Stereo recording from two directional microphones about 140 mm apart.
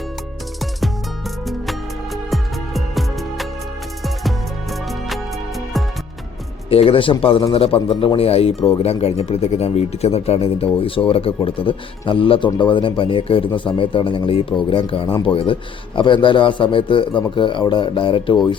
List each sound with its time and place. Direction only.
2.3 s music: centre (ahead or behind)
4.7 s music: centre (ahead or behind)
6.7 s a man's voice: 45° left (ahead or behind)